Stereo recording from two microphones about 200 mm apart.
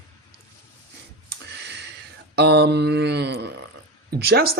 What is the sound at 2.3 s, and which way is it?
Mantra, 55° right (ahead or behind).